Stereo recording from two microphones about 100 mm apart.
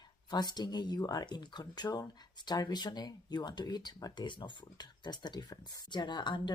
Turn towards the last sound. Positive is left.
turn(degrees=50)  # may be behind; listen again after turning